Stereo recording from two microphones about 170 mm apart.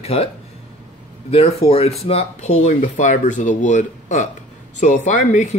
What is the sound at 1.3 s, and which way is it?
Speech, 35° left (ahead or behind).